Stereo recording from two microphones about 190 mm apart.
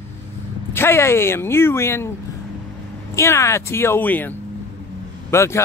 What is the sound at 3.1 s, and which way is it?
Speech, 15° left (ahead or behind).